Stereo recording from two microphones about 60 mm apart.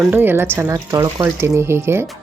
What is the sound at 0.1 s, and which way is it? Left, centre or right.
Speech, right.